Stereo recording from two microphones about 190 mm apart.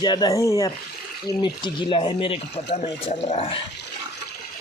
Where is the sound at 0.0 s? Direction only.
20° left (ahead or behind).